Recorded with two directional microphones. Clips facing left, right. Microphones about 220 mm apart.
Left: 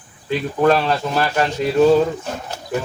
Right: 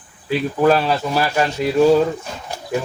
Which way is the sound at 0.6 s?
5° right (ahead or behind).